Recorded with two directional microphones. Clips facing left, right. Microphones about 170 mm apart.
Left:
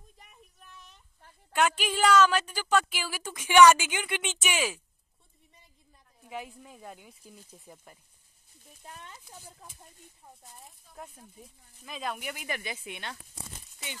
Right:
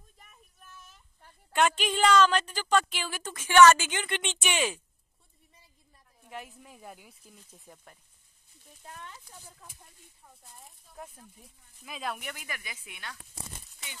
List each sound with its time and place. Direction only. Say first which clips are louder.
0.6 s a sound: right 2 dB; centre (ahead or behind)
1.5 s a woman's voice: right 1 dB; 10° left (ahead or behind)
6.2 s speech: left 3 dB; centre (ahead or behind)
8.8 s speech: right 1 dB; 20° left (ahead or behind)
10.4 s speech: left 2 dB; centre (ahead or behind)
12.4 s speech: left 7 dB; 30° left (ahead or behind)